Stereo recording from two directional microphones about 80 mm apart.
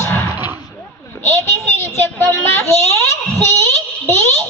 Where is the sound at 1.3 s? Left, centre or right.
Left.